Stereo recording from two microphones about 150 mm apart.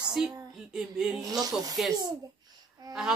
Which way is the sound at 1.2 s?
25° right (ahead or behind).